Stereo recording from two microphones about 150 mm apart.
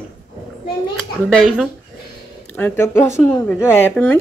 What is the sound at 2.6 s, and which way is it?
Speech, 15° left (ahead or behind).